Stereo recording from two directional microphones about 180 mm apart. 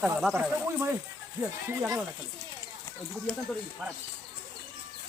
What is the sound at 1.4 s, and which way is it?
Speech, 15° right (ahead or behind).